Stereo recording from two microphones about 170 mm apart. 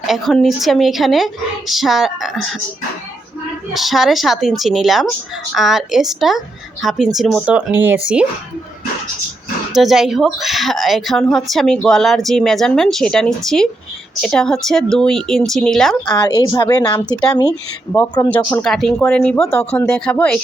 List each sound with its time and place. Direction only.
0.1 s speech: centre (ahead or behind)
3.8 s speech: centre (ahead or behind)
9.7 s speech: centre (ahead or behind)
16.0 s speech: 25° left (ahead or behind)
18.3 s speech: 10° left (ahead or behind)